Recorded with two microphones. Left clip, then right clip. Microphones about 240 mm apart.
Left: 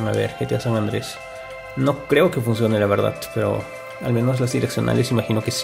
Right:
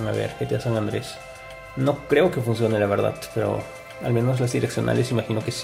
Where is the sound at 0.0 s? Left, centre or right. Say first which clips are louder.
Left 4 dB; centre.